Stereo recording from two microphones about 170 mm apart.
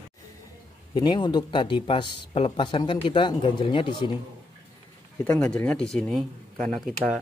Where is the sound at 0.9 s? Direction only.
25° left (ahead or behind).